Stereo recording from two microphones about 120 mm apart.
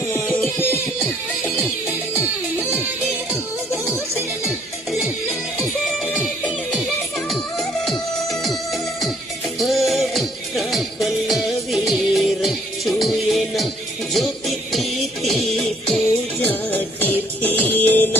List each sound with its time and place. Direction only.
0.1 s music: 20° left (ahead or behind)
2.1 s music: 20° left (ahead or behind)
7.9 s music: centre (ahead or behind)
9.6 s music: centre (ahead or behind)
16.4 s music: 15° left (ahead or behind)